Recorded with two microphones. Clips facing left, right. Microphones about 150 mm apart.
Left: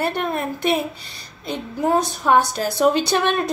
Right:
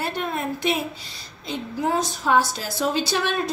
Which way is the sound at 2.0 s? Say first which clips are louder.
Left 3 dB; 60° left (ahead or behind).